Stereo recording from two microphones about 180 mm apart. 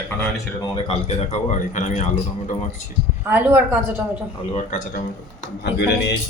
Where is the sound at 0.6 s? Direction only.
30° left (ahead or behind).